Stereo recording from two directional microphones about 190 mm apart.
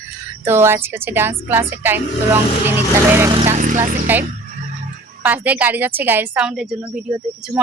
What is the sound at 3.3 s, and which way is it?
Speech, 35° right (ahead or behind).